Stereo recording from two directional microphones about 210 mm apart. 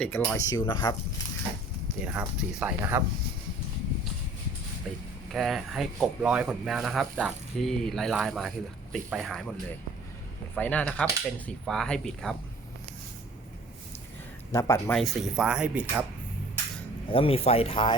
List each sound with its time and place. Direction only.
0.0 s speech: 5° left (ahead or behind)
0.3 s speech: 15° left (ahead or behind)
2.0 s speech: 5° right (ahead or behind)
4.9 s speech: centre (ahead or behind)
10.5 s speech: 5° left (ahead or behind)
14.5 s speech: 15° left (ahead or behind)
14.9 s speech: centre (ahead or behind)
17.1 s speech: 25° left (ahead or behind)